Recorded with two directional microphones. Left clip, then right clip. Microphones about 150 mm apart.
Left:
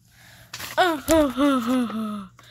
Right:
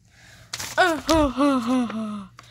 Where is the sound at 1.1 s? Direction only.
Centre (ahead or behind).